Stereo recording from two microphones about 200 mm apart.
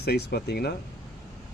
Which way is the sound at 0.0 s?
55° left (ahead or behind).